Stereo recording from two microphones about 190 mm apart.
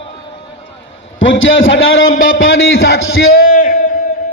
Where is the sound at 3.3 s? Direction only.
50° left (ahead or behind).